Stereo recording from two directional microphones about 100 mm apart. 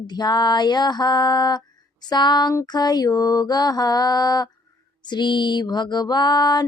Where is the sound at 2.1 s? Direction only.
45° left (ahead or behind).